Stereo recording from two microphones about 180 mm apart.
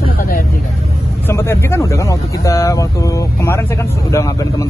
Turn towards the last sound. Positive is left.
turn(degrees=15)  # may be behind; listen again after turning